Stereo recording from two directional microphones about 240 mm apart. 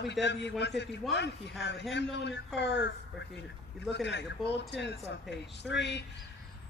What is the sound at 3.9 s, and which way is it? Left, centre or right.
A man's voice, left.